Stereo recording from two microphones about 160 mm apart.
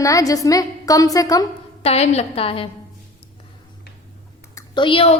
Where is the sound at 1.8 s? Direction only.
40° left (ahead or behind).